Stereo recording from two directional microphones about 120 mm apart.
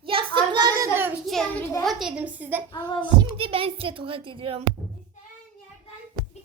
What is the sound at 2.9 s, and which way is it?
Child singing, 40° left (ahead or behind).